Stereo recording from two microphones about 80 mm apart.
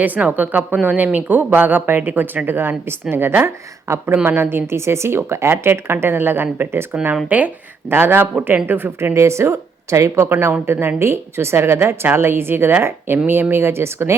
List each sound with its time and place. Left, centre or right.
0.0 s a woman's voice: right
10.2 s a woman's voice: right